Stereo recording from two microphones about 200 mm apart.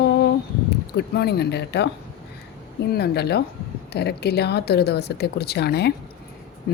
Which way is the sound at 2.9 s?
55° left (ahead or behind).